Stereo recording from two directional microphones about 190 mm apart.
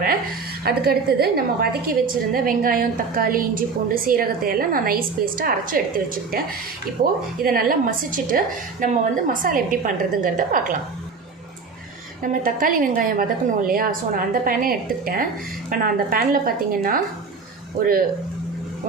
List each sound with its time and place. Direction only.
0.6 s a woman's voice: 55° right (ahead or behind)
12.2 s a woman's voice: 45° right (ahead or behind)